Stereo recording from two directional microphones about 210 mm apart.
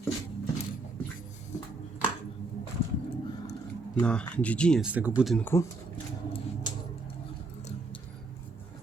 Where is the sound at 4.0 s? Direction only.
5° left (ahead or behind).